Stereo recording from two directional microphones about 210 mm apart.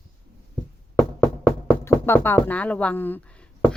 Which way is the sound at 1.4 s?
10° left (ahead or behind).